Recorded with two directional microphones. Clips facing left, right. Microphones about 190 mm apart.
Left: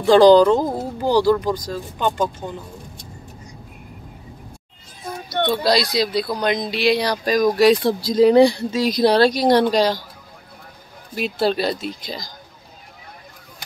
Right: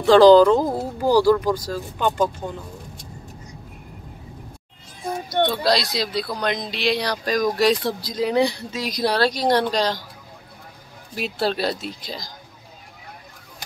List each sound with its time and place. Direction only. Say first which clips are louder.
0.0 s speech: even; centre (ahead or behind)
5.5 s speech: left 3 dB; centre (ahead or behind)
8.0 s a woman's voice: left 8 dB; 30° left (ahead or behind); by 10.0 s 10° left (ahead or behind)
11.1 s speech: left 3 dB; centre (ahead or behind)